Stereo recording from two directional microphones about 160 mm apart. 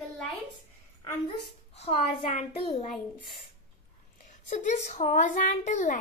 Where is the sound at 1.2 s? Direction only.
35° left (ahead or behind).